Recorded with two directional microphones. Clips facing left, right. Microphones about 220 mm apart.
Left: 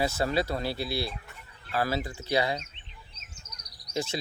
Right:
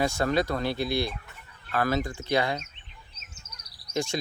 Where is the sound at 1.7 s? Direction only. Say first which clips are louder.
Right 3 dB; 30° left (ahead or behind).